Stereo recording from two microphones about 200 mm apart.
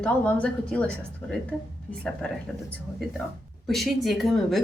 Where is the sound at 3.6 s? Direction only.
Centre (ahead or behind).